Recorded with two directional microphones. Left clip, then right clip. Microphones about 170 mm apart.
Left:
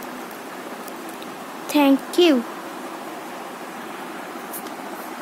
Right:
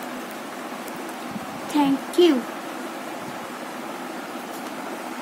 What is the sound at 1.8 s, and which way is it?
Speech, 50° left (ahead or behind).